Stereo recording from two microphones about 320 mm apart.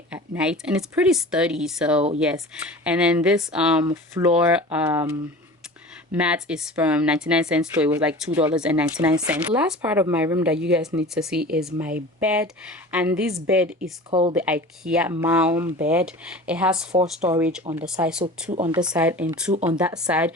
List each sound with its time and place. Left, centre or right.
0.1 s speech: centre
6.1 s speech: centre
14.1 s speech: centre
14.3 s speech: centre
16.9 s speech: centre
17.2 s speech: centre
17.8 s speech: centre
18.5 s speech: centre
18.9 s speech: centre